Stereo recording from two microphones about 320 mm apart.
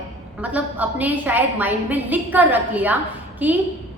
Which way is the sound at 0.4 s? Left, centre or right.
Centre.